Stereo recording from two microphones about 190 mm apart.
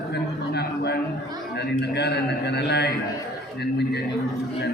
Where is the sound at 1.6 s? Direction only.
60° left (ahead or behind).